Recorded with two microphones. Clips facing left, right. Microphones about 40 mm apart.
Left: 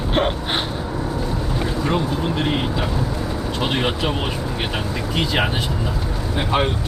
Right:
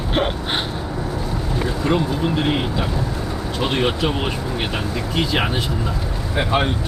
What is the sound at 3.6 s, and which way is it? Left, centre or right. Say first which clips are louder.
Speech: right 2 dB; centre.